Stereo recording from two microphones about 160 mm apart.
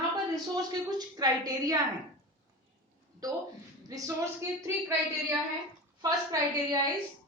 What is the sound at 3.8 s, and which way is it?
A woman's voice, 20° right (ahead or behind).